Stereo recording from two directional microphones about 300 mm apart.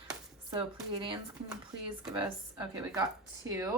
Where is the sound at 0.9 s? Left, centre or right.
Centre.